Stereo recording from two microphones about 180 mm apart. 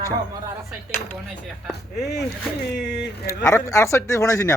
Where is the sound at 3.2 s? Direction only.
15° left (ahead or behind).